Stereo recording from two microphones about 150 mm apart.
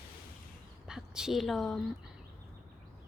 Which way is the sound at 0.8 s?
5° right (ahead or behind).